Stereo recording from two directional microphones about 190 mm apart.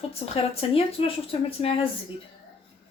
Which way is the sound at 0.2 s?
30° left (ahead or behind).